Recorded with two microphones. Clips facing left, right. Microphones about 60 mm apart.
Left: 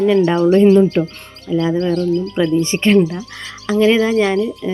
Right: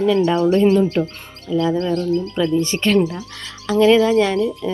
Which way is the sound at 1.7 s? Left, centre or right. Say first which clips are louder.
Left 3 dB; left.